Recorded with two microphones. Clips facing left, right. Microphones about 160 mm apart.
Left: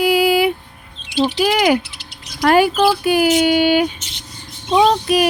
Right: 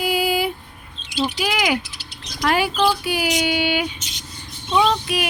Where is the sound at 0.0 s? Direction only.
70° left (ahead or behind).